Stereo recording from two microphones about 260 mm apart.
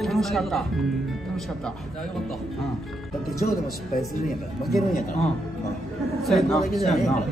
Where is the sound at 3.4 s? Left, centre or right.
Left.